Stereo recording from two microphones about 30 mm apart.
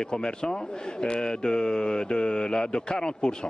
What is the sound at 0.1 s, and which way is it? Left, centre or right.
A man's voice, left.